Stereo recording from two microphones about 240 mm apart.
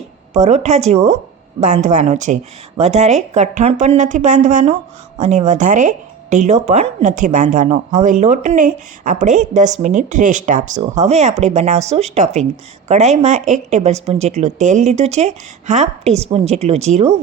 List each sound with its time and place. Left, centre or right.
0.3 s a woman's voice: right